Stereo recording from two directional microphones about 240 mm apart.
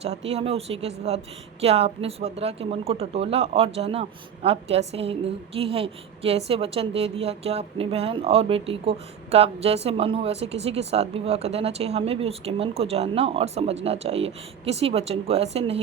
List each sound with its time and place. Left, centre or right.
0.0 s a woman's voice: right